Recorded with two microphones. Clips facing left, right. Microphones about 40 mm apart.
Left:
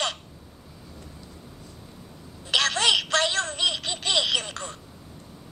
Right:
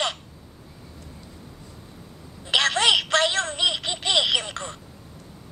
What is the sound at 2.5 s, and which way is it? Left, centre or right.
Telephone, right.